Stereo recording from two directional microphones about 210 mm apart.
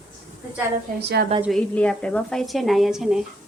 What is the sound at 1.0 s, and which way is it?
Speech, 50° right (ahead or behind).